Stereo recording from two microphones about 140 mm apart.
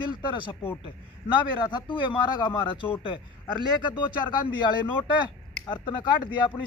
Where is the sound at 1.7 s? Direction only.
35° left (ahead or behind).